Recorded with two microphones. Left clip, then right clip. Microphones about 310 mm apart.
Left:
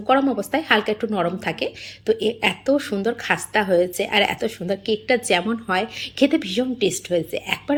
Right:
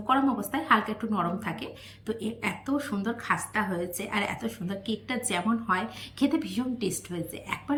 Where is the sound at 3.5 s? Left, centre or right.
Left.